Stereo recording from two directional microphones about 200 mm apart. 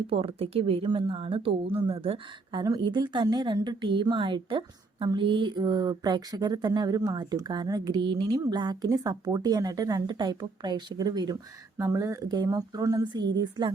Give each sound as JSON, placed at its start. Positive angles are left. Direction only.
{"t": 0.1, "sound": "speech", "side_deg": -30}